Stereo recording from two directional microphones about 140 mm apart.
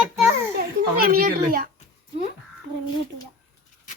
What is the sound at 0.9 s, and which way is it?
Speech, 90° right.